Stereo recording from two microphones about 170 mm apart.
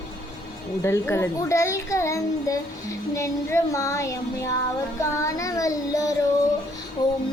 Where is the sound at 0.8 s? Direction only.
15° left (ahead or behind).